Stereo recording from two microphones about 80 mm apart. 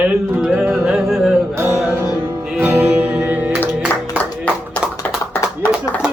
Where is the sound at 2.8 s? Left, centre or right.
Right.